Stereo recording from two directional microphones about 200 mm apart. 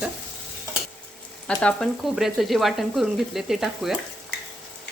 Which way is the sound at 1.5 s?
5° left (ahead or behind).